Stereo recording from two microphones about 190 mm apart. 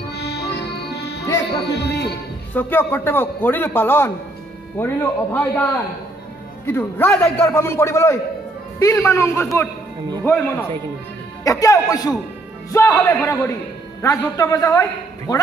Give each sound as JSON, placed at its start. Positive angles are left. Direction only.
{"t": 0.1, "sound": "music", "side_deg": 60}
{"t": 1.8, "sound": "speech", "side_deg": 60}
{"t": 2.5, "sound": "a man's voice", "side_deg": 10}